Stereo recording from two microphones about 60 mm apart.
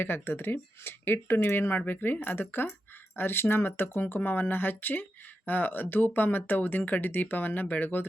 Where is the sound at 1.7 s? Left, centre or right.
Left.